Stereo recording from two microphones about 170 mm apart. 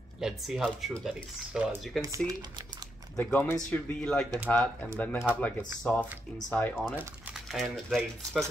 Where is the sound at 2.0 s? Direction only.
20° right (ahead or behind).